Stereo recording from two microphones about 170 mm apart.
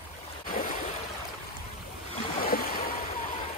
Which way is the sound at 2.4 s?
55° left (ahead or behind).